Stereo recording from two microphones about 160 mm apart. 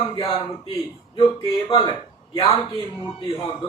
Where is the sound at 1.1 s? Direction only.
35° left (ahead or behind).